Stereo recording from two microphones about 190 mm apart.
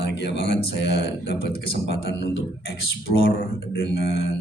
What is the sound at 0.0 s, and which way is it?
A man's voice, 60° left (ahead or behind).